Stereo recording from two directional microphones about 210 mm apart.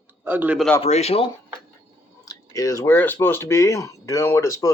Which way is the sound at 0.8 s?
30° left (ahead or behind).